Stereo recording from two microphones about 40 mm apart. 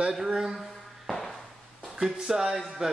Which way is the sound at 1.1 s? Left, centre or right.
Centre.